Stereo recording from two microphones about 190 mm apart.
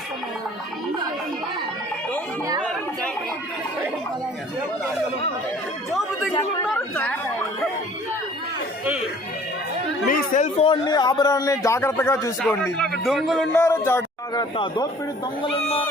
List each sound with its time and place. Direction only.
6.6 s speech: 5° left (ahead or behind)
10.1 s speech: 45° left (ahead or behind)
10.7 s a man's voice: 20° left (ahead or behind); by 13.5 s centre (ahead or behind)
13.5 s speech: 10° left (ahead or behind)
14.5 s speech: 25° left (ahead or behind)